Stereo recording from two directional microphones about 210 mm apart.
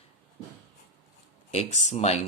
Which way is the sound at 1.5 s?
35° left (ahead or behind).